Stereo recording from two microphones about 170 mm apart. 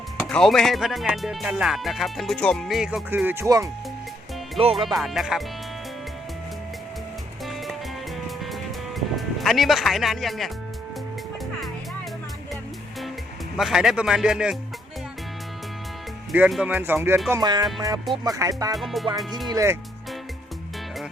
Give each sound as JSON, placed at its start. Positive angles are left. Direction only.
{"t": 0.3, "sound": "speech", "side_deg": 5}
{"t": 4.6, "sound": "speech", "side_deg": -35}
{"t": 4.9, "sound": "speech", "side_deg": 0}
{"t": 9.0, "sound": "speech", "side_deg": 0}
{"t": 13.6, "sound": "speech", "side_deg": 0}
{"t": 16.3, "sound": "speech", "side_deg": -5}
{"t": 17.3, "sound": "music", "side_deg": -25}
{"t": 18.7, "sound": "speech", "side_deg": 0}
{"t": 19.5, "sound": "music", "side_deg": -20}